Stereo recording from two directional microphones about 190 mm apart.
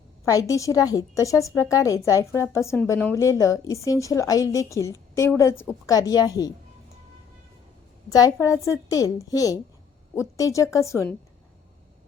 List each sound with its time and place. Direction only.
0.3 s a woman's voice: 15° left (ahead or behind)
8.1 s a woman's voice: 20° left (ahead or behind)